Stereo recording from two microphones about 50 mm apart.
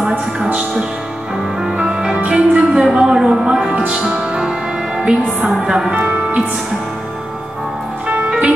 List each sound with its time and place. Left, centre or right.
0.5 s music: right
1.6 s music: centre
2.1 s music: right